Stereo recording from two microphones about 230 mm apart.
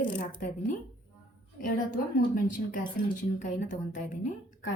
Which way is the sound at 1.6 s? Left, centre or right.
Left.